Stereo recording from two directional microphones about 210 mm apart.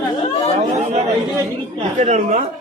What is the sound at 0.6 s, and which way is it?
A woman's voice, 35° right (ahead or behind).